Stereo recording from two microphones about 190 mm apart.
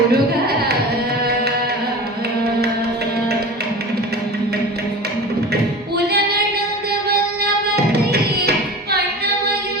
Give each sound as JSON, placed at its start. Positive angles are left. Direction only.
{"t": 0.1, "sound": "music", "side_deg": -55}
{"t": 6.0, "sound": "female singing", "side_deg": -55}
{"t": 7.8, "sound": "music", "side_deg": -55}